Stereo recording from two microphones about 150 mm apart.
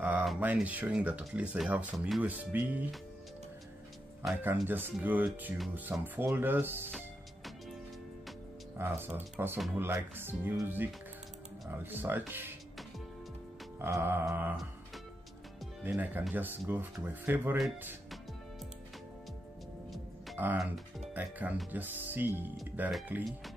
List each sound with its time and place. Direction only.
0.0 s speech: 5° right (ahead or behind)
4.6 s speech: 15° right (ahead or behind)
8.7 s speech: 15° right (ahead or behind)
13.7 s speech: 20° right (ahead or behind)
15.8 s speech: 10° right (ahead or behind)
20.3 s speech: 10° right (ahead or behind)